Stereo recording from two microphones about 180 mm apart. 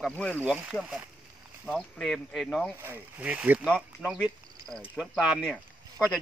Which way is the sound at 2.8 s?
10° right (ahead or behind).